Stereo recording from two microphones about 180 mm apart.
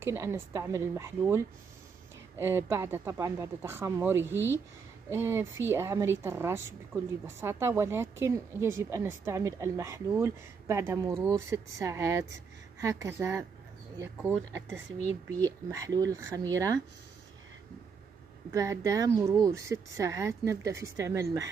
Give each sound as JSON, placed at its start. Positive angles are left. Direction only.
{"t": 0.0, "sound": "a woman's voice", "side_deg": -15}
{"t": 15.4, "sound": "a woman's voice", "side_deg": -20}
{"t": 18.5, "sound": "a woman's voice", "side_deg": -15}